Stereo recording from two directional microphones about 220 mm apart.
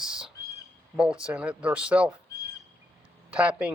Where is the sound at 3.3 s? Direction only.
5° right (ahead or behind).